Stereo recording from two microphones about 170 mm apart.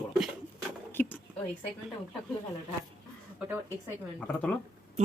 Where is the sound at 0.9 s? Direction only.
10° left (ahead or behind).